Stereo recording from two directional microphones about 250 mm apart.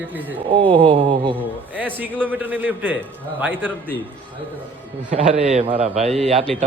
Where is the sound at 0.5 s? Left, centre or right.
Right.